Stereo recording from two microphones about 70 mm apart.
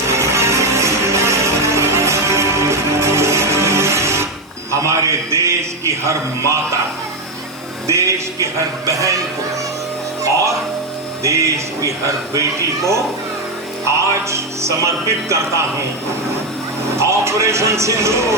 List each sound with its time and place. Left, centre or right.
0.1 s music: right
4.7 s a sound: right
7.9 s music: right
8.9 s speech: right
11.2 s speech: right
17.0 s speech: right